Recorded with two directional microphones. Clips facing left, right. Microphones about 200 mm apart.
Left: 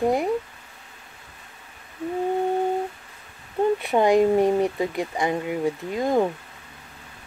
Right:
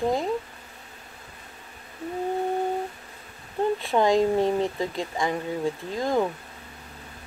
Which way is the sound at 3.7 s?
20° left (ahead or behind).